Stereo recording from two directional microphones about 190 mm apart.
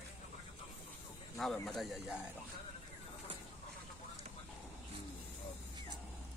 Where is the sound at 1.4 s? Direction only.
Centre (ahead or behind).